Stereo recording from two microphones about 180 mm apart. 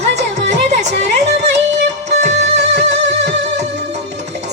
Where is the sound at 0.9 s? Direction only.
70° right (ahead or behind).